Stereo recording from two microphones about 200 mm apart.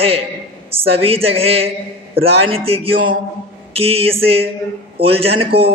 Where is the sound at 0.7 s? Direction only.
30° right (ahead or behind).